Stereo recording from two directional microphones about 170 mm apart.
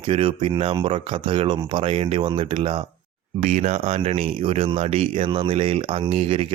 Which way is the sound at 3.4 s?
45° right (ahead or behind).